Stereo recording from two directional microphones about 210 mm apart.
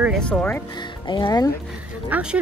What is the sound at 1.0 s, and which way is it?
Speech, 20° left (ahead or behind).